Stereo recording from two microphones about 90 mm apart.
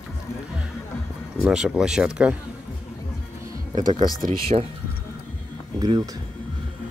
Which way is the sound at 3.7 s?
50° right (ahead or behind).